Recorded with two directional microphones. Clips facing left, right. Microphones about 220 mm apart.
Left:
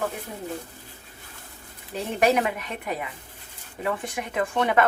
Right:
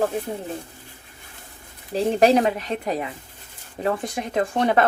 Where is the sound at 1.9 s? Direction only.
30° right (ahead or behind).